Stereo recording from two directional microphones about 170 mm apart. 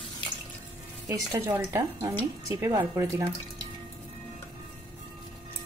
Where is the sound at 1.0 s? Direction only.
20° right (ahead or behind).